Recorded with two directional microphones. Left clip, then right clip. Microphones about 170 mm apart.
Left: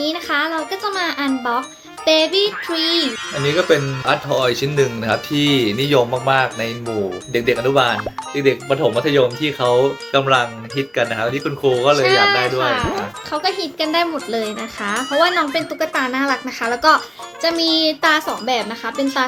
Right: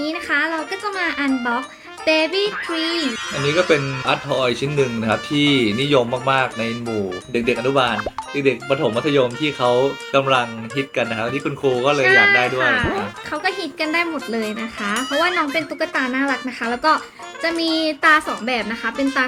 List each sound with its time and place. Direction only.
0.0 s speech: 10° right (ahead or behind)
18.4 s speech: 40° left (ahead or behind)
18.9 s speech: 5° right (ahead or behind)